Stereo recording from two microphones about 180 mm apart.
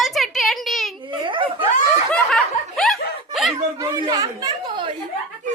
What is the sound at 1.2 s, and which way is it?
Snicker, 30° right (ahead or behind).